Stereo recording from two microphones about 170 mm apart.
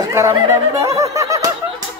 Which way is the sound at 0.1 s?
15° right (ahead or behind).